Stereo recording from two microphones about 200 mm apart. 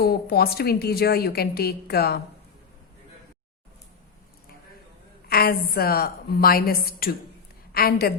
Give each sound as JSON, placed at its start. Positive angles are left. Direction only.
{"t": 0.0, "sound": "a woman's voice", "side_deg": 50}
{"t": 5.3, "sound": "a woman's voice", "side_deg": 50}